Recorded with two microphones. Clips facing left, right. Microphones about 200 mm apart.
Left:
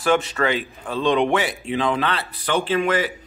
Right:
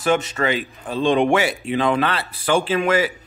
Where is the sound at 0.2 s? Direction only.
20° right (ahead or behind).